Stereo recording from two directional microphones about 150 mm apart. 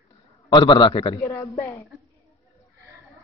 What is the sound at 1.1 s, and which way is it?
Speech, 20° left (ahead or behind).